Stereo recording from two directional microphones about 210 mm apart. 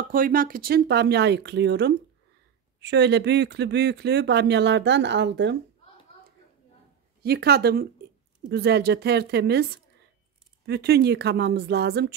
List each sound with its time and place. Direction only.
0.1 s speech: 40° right (ahead or behind)
7.2 s speech: 50° right (ahead or behind)
10.7 s speech: 50° right (ahead or behind)